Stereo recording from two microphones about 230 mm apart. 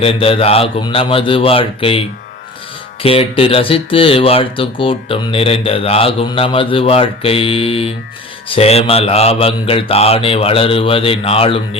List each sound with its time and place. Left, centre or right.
0.0 s speech: left
3.0 s speech: left